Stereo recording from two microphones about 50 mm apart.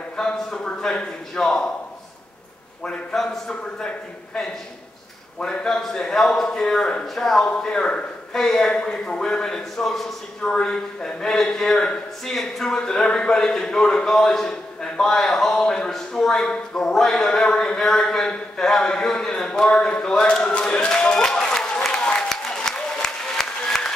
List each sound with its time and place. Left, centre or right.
0.2 s a man's voice: centre
2.8 s a man's voice: left
3.2 s a man's voice: centre
5.4 s a man's voice: centre
7.5 s a man's voice: centre
8.4 s a man's voice: centre
12.4 s a man's voice: centre
21.9 s applause: centre